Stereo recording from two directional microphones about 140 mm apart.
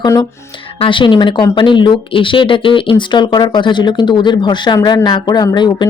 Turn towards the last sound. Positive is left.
turn(degrees=30)  # may be behind; listen again after turning